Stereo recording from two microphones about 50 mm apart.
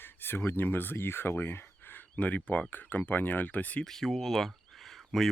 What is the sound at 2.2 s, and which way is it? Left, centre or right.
Speech, left.